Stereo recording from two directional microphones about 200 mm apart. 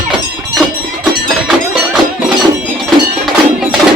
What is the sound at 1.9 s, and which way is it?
Music, 5° right (ahead or behind).